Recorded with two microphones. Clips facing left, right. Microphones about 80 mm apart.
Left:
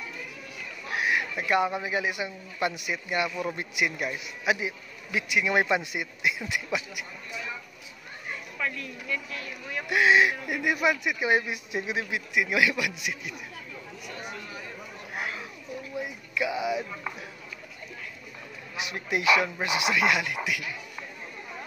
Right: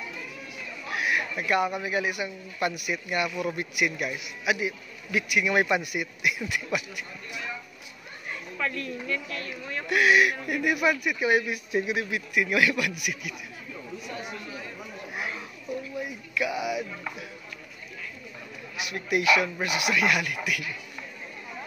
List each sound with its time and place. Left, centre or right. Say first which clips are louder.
0.9 s a man's voice: even; left
8.5 s speech: right 3 dB; centre
9.8 s a man's voice: even; left
15.1 s chatter: even; centre
16.0 s a man's voice: left 2 dB; left
18.8 s a man's voice: right 2 dB; left